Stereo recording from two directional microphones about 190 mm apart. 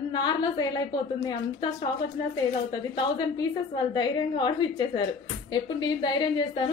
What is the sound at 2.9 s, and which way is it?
A woman's voice, 20° left (ahead or behind).